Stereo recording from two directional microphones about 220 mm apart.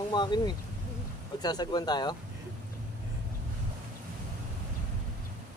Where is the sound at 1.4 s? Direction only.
20° left (ahead or behind).